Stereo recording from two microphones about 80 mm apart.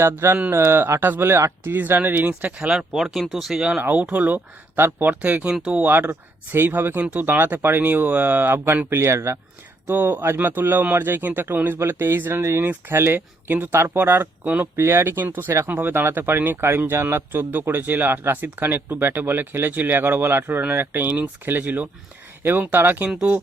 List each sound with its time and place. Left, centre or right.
0.0 s speech: right
2.6 s speech: centre; by 9.4 s right
9.8 s speech: right